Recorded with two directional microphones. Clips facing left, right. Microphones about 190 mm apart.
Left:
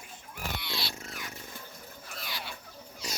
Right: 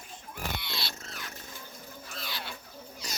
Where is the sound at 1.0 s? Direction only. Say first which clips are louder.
Left 2 dB; 15° left (ahead or behind).